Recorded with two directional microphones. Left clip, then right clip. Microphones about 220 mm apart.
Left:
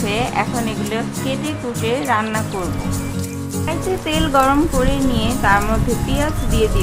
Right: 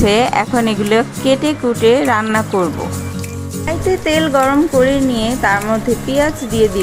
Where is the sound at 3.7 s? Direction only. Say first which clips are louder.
Right 6 dB; 20° right (ahead or behind).